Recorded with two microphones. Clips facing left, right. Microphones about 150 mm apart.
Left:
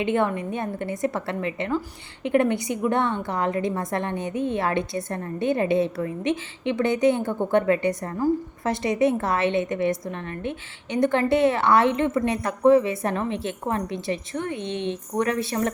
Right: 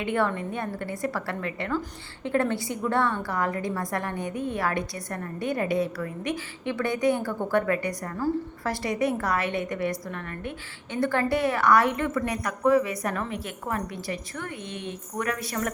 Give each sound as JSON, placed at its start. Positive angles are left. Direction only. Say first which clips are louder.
{"t": 0.0, "sound": "a woman's voice", "louder": "left 3 dB", "side_deg": 20}